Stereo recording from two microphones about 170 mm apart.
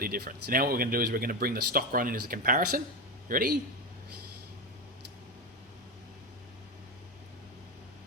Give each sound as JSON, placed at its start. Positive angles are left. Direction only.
{"t": 0.0, "sound": "a man's voice", "side_deg": -60}